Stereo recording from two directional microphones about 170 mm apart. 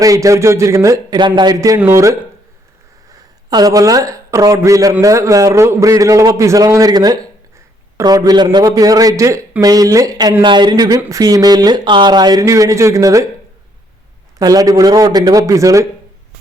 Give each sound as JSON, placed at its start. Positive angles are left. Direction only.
{"t": 0.0, "sound": "speech", "side_deg": -20}
{"t": 14.3, "sound": "speech", "side_deg": -20}